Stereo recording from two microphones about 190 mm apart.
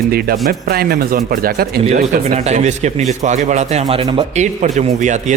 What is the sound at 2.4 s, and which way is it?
Speech, 35° right (ahead or behind).